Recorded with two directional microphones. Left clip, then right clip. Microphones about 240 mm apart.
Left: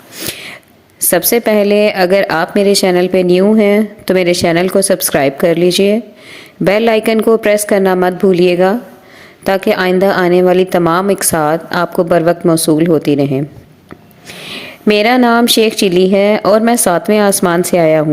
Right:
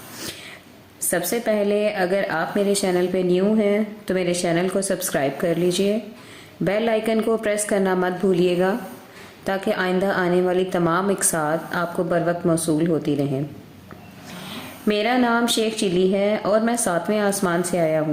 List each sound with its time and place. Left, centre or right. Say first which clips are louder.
0.2 s a sound: left 12 dB; left
1.1 s a woman's voice: left 11 dB; left
14.4 s a woman's voice: left 11 dB; left